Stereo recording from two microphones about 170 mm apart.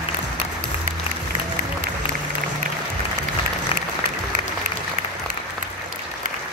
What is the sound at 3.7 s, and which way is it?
Applause, 35° left (ahead or behind).